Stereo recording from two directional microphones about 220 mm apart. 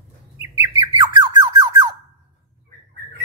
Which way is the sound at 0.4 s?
15° right (ahead or behind).